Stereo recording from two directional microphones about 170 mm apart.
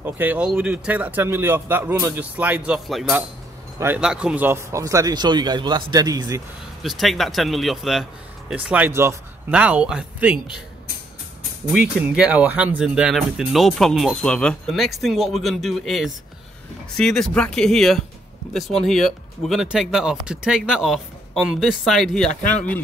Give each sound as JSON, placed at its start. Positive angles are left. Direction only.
{"t": 0.0, "sound": "speech", "side_deg": -10}
{"t": 6.8, "sound": "speech", "side_deg": 0}
{"t": 11.7, "sound": "speech", "side_deg": -10}